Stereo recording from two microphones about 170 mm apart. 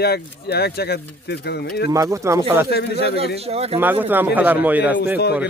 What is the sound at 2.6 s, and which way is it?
Speech, 70° left (ahead or behind).